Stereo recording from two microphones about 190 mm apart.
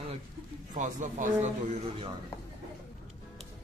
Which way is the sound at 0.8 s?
40° right (ahead or behind).